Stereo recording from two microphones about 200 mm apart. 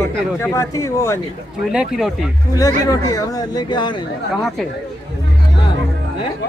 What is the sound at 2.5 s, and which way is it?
Speech, 15° left (ahead or behind).